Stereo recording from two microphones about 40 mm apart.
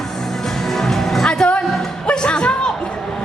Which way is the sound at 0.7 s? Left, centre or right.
Centre.